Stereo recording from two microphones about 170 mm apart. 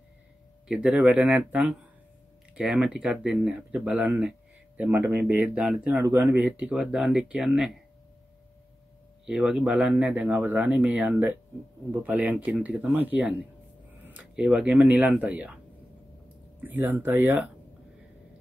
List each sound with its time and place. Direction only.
0.7 s speech: 5° right (ahead or behind)
9.2 s speech: 5° right (ahead or behind)